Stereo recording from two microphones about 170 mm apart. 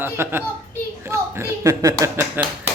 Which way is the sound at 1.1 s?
15° right (ahead or behind).